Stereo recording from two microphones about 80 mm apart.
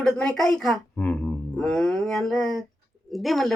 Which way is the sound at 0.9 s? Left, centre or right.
Left.